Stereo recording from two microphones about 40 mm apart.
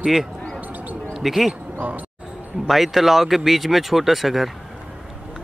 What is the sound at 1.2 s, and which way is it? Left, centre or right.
Speech, centre.